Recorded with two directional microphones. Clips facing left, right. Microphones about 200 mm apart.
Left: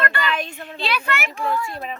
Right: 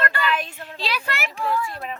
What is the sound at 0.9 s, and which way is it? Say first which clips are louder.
Speech: left 4 dB; 35° right (ahead or behind).